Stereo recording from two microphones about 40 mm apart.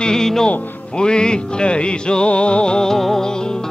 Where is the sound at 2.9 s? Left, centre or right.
Centre.